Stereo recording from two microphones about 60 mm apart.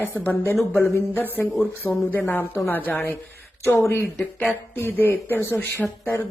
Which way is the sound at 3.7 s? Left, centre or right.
Left.